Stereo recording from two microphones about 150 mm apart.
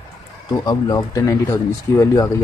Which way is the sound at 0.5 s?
25° left (ahead or behind).